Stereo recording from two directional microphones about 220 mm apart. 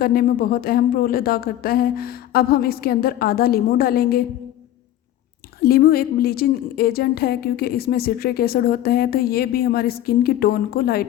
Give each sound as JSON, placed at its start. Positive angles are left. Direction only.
{"t": 0.0, "sound": "a woman's voice", "side_deg": 40}
{"t": 5.6, "sound": "a woman's voice", "side_deg": 45}